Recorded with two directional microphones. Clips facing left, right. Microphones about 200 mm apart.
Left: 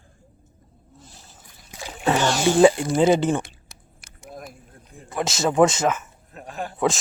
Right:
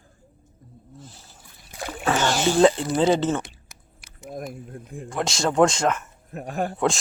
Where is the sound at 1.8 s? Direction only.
55° right (ahead or behind).